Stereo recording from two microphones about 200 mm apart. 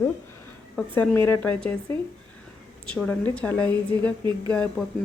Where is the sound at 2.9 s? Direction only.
5° left (ahead or behind).